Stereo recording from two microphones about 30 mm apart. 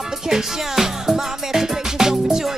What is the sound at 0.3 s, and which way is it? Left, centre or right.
Music, centre.